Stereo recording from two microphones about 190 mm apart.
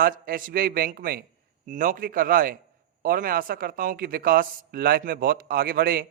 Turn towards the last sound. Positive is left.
turn(degrees=-50)  # may be behind; listen again after turning